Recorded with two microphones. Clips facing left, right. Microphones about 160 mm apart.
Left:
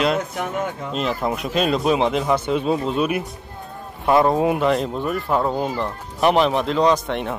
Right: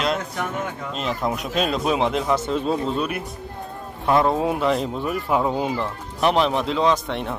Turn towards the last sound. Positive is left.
turn(degrees=0)  # may be behind; listen again after turning